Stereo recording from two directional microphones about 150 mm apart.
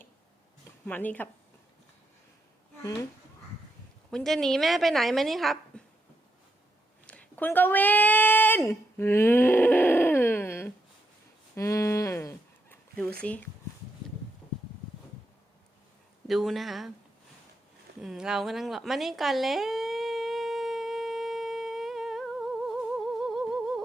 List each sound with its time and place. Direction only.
0.9 s speech: 10° left (ahead or behind)
4.1 s a woman's voice: 5° left (ahead or behind)
7.1 s a sound: 10° left (ahead or behind)
13.2 s speech: 10° left (ahead or behind)
16.2 s a woman's voice: centre (ahead or behind)
18.0 s a sound: 5° right (ahead or behind)
23.2 s humming: centre (ahead or behind)